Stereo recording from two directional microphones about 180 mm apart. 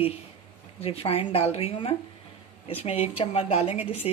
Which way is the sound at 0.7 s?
35° left (ahead or behind).